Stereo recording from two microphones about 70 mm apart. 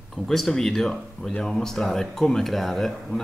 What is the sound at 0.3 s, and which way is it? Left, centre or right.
Speech, centre.